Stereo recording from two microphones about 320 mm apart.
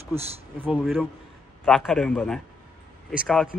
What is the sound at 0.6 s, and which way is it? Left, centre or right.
A man's voice, centre.